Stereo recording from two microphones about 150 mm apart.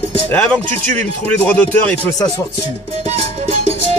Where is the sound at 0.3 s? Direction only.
5° left (ahead or behind).